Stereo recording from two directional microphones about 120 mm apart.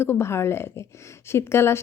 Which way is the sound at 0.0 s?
20° left (ahead or behind).